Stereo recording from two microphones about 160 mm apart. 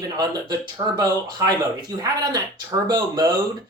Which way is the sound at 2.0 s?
25° right (ahead or behind).